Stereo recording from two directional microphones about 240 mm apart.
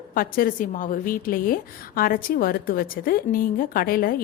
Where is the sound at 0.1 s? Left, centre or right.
Left.